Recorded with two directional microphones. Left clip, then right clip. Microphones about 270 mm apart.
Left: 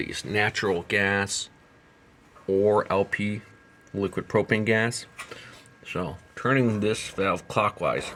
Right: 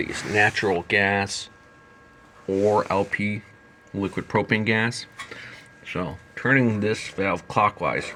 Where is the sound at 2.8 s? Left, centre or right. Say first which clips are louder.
Right 1 dB; centre.